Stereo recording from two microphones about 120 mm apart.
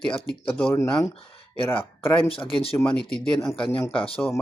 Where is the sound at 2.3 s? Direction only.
50° left (ahead or behind).